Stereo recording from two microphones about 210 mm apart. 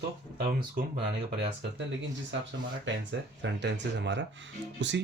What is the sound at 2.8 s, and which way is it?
Speech, 60° right (ahead or behind).